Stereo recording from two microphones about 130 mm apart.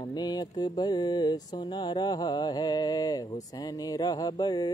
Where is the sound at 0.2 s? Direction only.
30° left (ahead or behind).